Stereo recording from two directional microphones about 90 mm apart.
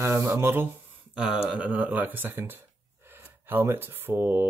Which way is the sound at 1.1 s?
5° right (ahead or behind).